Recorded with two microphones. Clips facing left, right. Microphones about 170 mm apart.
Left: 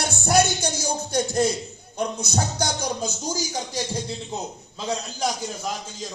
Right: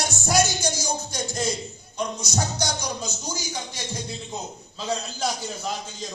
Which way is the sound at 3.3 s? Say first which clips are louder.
Left 4 dB; 40° left (ahead or behind).